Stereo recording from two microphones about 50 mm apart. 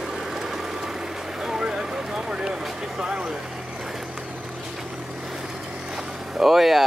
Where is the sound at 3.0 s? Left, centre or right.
Centre.